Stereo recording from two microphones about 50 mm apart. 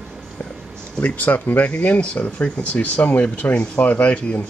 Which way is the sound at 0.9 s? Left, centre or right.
Left.